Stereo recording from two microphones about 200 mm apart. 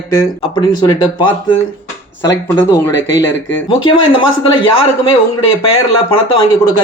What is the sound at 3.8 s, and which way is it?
Speech, 25° left (ahead or behind).